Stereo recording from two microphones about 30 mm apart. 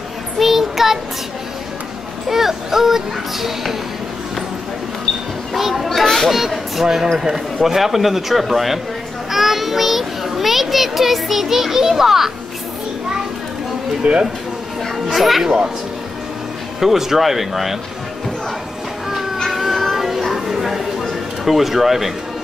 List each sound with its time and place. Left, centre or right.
0.4 s child singing: centre
2.2 s speech: centre
5.5 s a child's voice: centre
6.8 s a man's voice: centre
9.3 s child singing: centre
14.0 s speech: right
15.1 s a man's voice: centre
16.8 s speech: centre
19.4 s music: centre
20.2 s a sound: centre
21.5 s speech: centre